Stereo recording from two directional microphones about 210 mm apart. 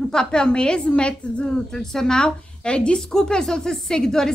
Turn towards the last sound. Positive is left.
turn(degrees=5)  # may be behind; listen again after turning